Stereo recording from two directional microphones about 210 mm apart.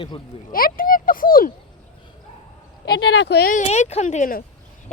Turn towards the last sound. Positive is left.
turn(degrees=40)  # may be behind; listen again after turning